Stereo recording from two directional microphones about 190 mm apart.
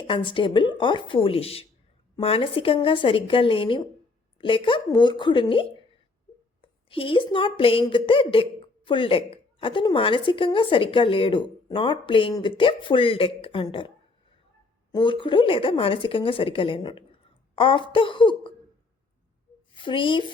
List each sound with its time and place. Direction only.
0.1 s speech: 25° left (ahead or behind)
14.9 s speech: 25° left (ahead or behind)
19.7 s speech: 25° left (ahead or behind)